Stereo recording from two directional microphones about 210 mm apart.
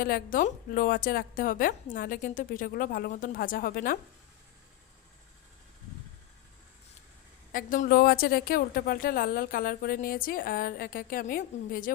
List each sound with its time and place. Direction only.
0.0 s a woman's voice: 45° left (ahead or behind)
7.5 s a woman's voice: 40° left (ahead or behind)